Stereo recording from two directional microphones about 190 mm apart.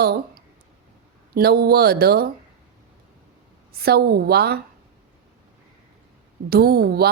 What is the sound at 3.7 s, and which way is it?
Speech, 55° right (ahead or behind).